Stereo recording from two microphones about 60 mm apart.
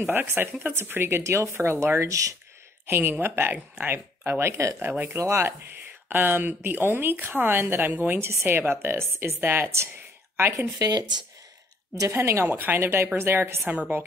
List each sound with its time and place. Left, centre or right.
0.0 s speech: right
2.9 s a woman's voice: right
3.5 s speech: right
3.9 s speech: right
4.7 s a woman's voice: right
5.1 s speech: right
6.0 s a woman's voice: right
10.8 s speech: right
11.9 s speech: right
12.4 s a woman's voice: right
13.7 s speech: right